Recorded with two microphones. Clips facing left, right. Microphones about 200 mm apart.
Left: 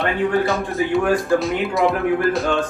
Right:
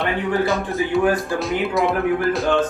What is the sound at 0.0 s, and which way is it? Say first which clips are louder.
Speech: left 2 dB; centre (ahead or behind).